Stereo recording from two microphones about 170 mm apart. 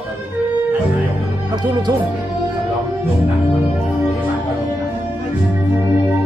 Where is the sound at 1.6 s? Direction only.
25° right (ahead or behind).